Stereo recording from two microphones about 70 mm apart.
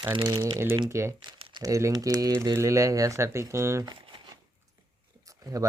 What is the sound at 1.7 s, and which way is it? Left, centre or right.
Speech, right.